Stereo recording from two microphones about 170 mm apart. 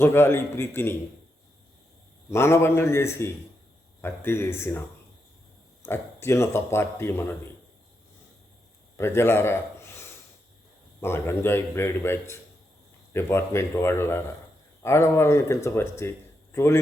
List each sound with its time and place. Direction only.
0.0 s speech: 15° left (ahead or behind)
2.3 s speech: 15° left (ahead or behind)
5.8 s speech: 15° left (ahead or behind)
9.0 s a man's voice: 15° left (ahead or behind)